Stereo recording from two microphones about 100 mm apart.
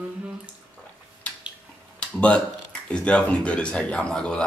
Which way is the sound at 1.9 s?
10° left (ahead or behind).